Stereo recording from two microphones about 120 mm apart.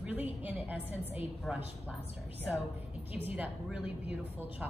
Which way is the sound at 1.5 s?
Centre (ahead or behind).